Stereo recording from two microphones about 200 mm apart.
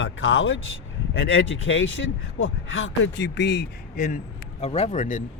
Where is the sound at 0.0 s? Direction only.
90° left.